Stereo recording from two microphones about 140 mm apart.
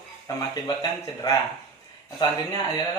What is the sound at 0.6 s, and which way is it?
Speech, 25° left (ahead or behind).